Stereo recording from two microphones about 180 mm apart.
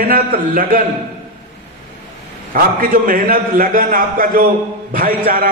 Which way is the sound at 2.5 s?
50° right (ahead or behind).